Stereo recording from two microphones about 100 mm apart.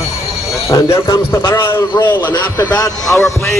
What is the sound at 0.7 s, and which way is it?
A man's voice, 35° left (ahead or behind).